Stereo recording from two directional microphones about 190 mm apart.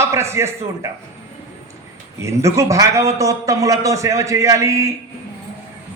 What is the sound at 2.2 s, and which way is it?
A man's voice, 15° right (ahead or behind).